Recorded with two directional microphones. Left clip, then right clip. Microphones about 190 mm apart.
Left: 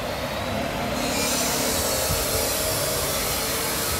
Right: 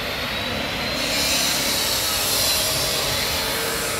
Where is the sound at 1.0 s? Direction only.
55° left (ahead or behind).